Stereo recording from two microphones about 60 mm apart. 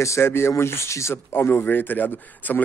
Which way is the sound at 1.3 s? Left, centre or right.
Left.